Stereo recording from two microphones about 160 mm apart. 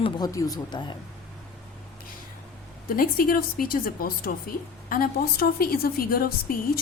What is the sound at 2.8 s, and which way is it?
A woman's voice, 60° left (ahead or behind).